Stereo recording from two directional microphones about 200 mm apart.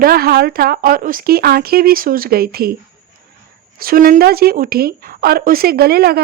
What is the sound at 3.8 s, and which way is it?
Speech, 45° right (ahead or behind).